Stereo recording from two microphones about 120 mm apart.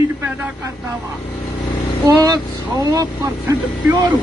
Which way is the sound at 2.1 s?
30° right (ahead or behind).